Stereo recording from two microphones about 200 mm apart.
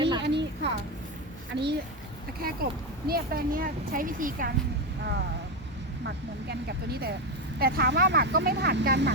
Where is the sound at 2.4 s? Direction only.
50° right (ahead or behind).